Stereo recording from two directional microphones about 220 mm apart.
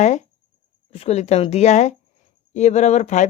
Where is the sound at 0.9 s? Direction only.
25° left (ahead or behind).